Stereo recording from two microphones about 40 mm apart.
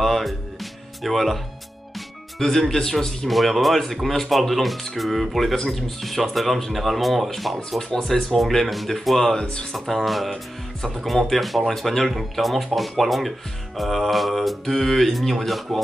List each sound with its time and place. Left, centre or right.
0.0 s music: centre
1.0 s speech: centre
3.3 s speech: centre
7.9 s speech: centre
9.4 s speech: left
9.7 s speech: centre